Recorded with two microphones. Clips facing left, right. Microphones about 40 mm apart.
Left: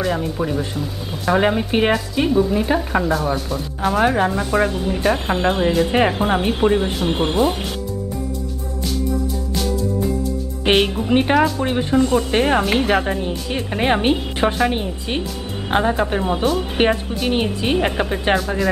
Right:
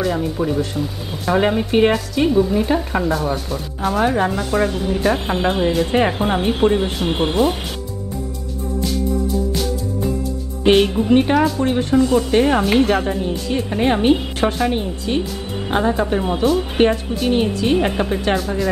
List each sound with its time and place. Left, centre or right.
0.0 s a woman's voice: centre
10.6 s a woman's voice: centre
11.1 s speech: centre